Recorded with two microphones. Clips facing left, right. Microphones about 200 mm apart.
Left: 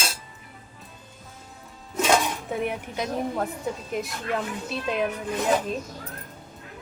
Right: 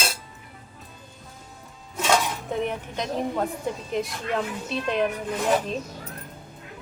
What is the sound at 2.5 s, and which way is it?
Speech, 10° left (ahead or behind).